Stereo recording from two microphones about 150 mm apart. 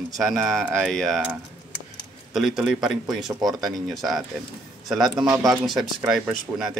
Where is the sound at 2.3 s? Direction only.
Centre (ahead or behind).